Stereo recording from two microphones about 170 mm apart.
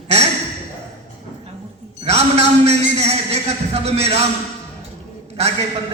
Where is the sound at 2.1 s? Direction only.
40° right (ahead or behind).